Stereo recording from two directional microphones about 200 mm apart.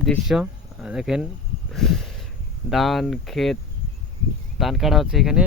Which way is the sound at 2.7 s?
Centre (ahead or behind).